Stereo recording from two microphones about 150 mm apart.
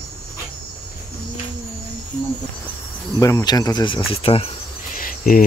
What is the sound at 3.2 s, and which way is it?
Speech, 20° left (ahead or behind).